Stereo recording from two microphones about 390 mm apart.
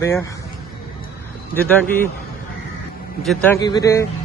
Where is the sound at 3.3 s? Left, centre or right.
Centre.